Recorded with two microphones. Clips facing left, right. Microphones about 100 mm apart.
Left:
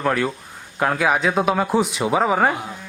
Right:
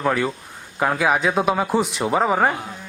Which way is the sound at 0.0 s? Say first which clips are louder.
Even; centre (ahead or behind).